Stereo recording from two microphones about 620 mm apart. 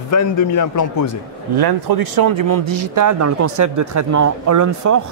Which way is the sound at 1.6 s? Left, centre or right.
Right.